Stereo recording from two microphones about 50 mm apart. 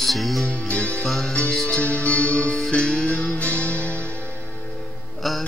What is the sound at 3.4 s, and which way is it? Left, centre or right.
Music, right.